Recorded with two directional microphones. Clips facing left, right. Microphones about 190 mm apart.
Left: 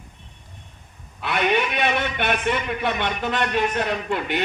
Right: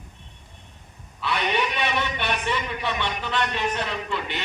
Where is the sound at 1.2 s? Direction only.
50° left (ahead or behind).